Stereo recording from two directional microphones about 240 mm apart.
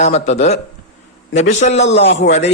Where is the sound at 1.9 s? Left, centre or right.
Left.